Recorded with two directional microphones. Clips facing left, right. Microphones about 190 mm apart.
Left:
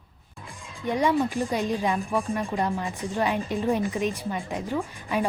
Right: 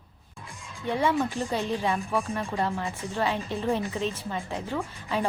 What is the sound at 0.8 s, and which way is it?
Speech, 15° left (ahead or behind).